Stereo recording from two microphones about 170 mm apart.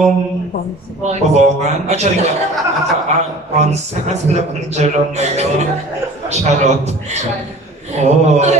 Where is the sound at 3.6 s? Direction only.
40° right (ahead or behind).